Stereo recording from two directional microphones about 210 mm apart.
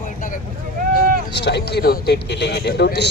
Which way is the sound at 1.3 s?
55° left (ahead or behind).